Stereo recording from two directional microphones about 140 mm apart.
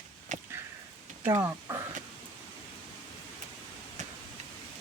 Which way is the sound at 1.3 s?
20° right (ahead or behind).